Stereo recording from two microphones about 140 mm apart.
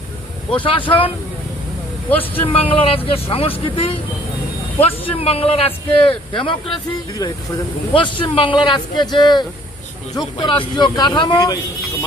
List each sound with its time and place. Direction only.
0.6 s a man's voice: 40° left (ahead or behind)
2.0 s speech: 15° left (ahead or behind)
2.7 s a man's voice: 40° left (ahead or behind)